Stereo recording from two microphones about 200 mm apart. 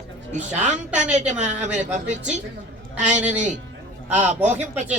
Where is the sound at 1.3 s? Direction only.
35° right (ahead or behind).